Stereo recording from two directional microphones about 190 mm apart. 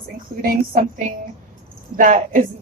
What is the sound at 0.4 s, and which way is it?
A woman's voice, 45° right (ahead or behind).